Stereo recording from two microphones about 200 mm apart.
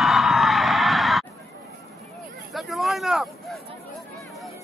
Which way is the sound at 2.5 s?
Centre (ahead or behind).